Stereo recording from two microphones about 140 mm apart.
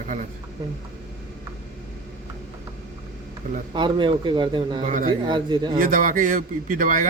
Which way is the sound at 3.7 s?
35° right (ahead or behind).